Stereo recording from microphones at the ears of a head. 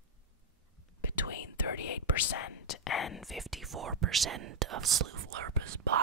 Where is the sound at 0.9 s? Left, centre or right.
Left.